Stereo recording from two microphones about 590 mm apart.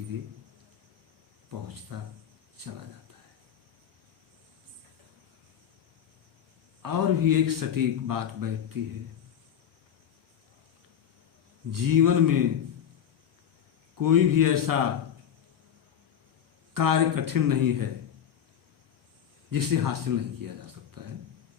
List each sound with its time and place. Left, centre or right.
1.6 s a man's voice: right
6.8 s a man's voice: right
11.7 s a man's voice: right
14.0 s a man's voice: right
16.7 s a man's voice: right
19.5 s speech: right